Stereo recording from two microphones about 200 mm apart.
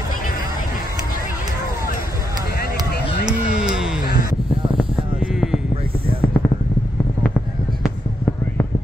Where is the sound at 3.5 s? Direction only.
5° right (ahead or behind).